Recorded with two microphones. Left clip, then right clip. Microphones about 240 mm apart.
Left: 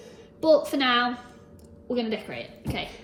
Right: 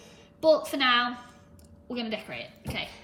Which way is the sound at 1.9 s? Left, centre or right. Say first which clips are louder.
Left 5 dB; centre.